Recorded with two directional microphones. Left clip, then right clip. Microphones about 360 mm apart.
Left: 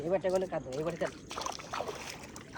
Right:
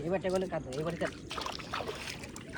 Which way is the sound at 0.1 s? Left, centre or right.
Left.